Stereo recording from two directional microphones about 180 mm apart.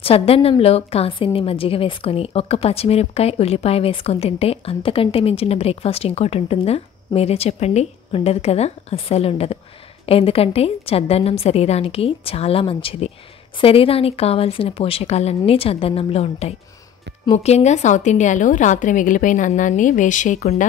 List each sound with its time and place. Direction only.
0.0 s a woman's voice: 30° left (ahead or behind)